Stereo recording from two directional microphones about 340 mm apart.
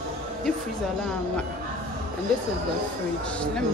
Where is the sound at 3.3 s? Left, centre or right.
Centre.